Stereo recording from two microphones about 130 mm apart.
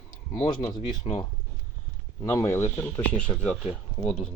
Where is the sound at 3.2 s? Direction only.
10° left (ahead or behind).